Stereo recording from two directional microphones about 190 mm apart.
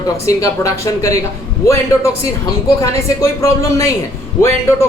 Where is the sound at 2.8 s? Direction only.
15° left (ahead or behind).